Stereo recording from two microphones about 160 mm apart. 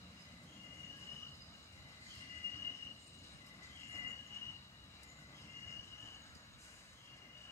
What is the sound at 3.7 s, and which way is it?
Train, 20° left (ahead or behind).